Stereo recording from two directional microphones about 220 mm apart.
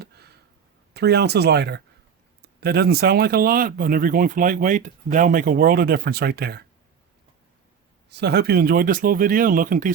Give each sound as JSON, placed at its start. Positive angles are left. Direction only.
{"t": 0.9, "sound": "speech", "side_deg": -50}
{"t": 8.1, "sound": "speech", "side_deg": -50}